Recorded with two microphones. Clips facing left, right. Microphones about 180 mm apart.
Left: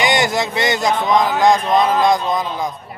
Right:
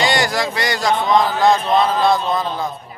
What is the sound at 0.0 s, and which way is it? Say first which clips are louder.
Speech: left 1 dB; 20° left (ahead or behind).